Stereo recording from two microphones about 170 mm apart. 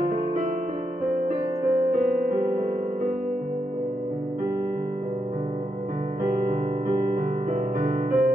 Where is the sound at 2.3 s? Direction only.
50° right (ahead or behind).